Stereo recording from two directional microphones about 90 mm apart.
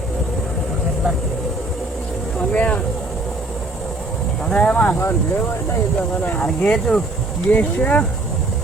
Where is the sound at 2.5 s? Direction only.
15° left (ahead or behind).